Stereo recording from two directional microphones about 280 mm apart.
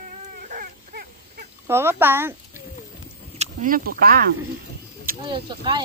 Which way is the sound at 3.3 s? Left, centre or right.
Right.